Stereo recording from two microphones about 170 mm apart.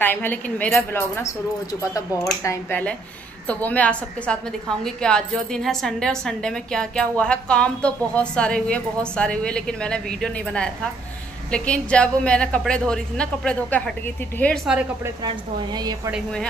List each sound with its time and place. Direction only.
0.0 s a woman's voice: 10° left (ahead or behind)
2.4 s a woman's voice: 15° left (ahead or behind)
14.7 s a woman's voice: 5° right (ahead or behind)
15.2 s speech: 25° right (ahead or behind)